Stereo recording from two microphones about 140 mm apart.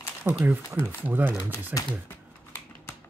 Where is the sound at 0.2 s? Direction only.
15° right (ahead or behind).